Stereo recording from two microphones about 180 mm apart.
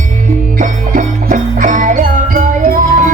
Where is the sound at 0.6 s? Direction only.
45° right (ahead or behind).